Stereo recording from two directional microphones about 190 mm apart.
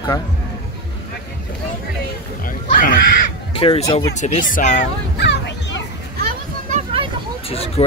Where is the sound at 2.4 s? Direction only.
45° left (ahead or behind).